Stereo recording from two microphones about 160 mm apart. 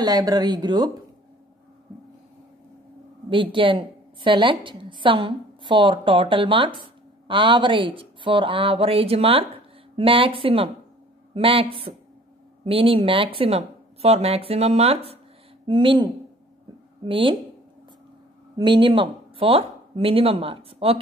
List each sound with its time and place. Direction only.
0.0 s speech: 25° right (ahead or behind)
3.5 s a woman's voice: 30° right (ahead or behind)
18.6 s speech: 30° right (ahead or behind)